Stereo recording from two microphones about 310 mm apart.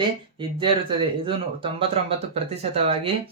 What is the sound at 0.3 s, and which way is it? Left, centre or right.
Speech, centre.